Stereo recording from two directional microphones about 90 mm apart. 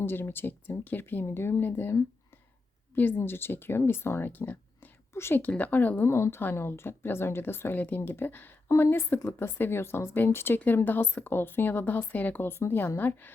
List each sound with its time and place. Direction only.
0.0 s a woman's voice: 25° left (ahead or behind)